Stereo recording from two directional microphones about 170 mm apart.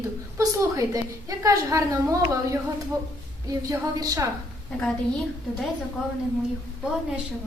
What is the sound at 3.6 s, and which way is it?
Speech, 20° right (ahead or behind).